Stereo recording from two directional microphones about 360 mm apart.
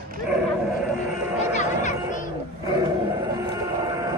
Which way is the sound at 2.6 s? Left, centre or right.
Centre.